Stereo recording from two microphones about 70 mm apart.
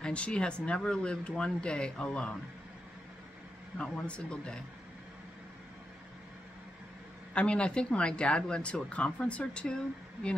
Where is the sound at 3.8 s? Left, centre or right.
Centre.